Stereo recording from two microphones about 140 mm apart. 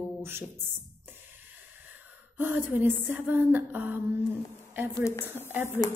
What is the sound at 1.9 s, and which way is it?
Gasp, 15° right (ahead or behind).